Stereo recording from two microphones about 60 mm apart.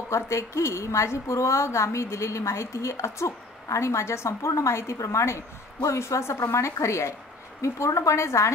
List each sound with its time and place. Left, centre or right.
0.1 s a woman's voice: left